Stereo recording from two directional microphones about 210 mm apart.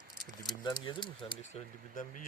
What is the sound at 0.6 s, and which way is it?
Speech, 20° left (ahead or behind).